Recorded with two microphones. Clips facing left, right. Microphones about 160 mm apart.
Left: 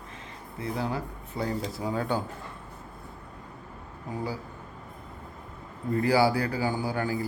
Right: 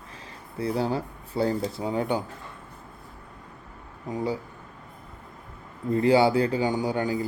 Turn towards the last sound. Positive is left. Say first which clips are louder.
# right 3 dB
turn(degrees=-20)  # may be behind; listen again after turning